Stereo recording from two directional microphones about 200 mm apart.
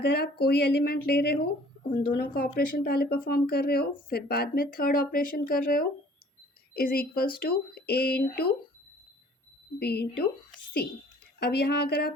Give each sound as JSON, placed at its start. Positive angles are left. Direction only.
{"t": 0.0, "sound": "speech", "side_deg": 55}
{"t": 9.7, "sound": "speech", "side_deg": 55}
{"t": 11.3, "sound": "speech", "side_deg": 55}